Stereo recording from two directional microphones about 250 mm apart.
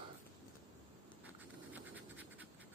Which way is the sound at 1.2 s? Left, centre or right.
Centre.